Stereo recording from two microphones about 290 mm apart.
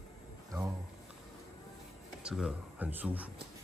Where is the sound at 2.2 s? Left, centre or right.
Centre.